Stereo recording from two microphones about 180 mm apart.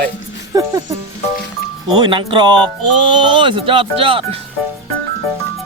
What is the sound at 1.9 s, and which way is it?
Speech, 25° right (ahead or behind).